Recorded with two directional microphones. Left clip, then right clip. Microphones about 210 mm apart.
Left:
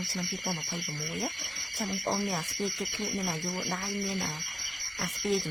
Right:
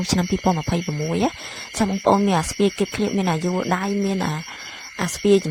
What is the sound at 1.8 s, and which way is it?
Speech, 35° right (ahead or behind).